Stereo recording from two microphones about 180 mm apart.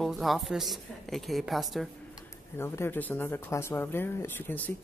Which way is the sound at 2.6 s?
15° left (ahead or behind).